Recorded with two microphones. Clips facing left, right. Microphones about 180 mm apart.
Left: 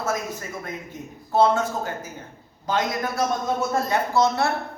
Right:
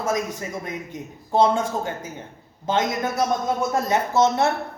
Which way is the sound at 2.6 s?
25° right (ahead or behind).